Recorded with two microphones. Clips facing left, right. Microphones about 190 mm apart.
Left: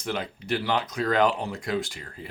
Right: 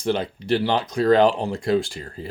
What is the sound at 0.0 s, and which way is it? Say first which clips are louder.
Speech: right 7 dB; 30° right (ahead or behind).